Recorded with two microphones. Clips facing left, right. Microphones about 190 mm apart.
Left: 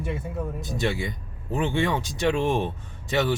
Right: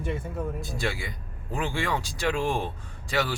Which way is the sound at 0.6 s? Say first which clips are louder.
Left 4 dB; 20° left (ahead or behind).